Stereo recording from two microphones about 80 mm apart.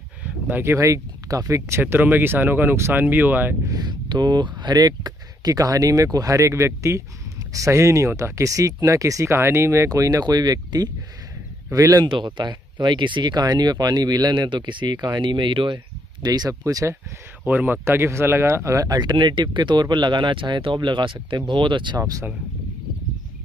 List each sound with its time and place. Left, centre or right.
0.2 s a sound: right
0.7 s speech: right
3.7 s speech: right
11.7 s speech: right
12.1 s speech: right
16.6 s speech: right
17.5 s speech: right
18.9 s speech: right
21.9 s speech: right